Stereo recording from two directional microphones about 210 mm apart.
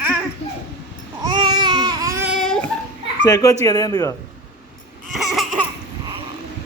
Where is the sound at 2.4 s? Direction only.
Centre (ahead or behind).